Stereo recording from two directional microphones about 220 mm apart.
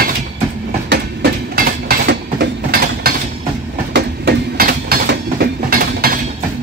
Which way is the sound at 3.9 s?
45° right (ahead or behind).